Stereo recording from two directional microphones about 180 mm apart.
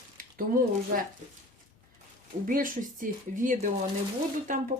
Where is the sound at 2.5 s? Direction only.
50° right (ahead or behind).